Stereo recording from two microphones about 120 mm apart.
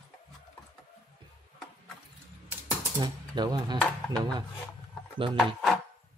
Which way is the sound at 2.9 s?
35° right (ahead or behind).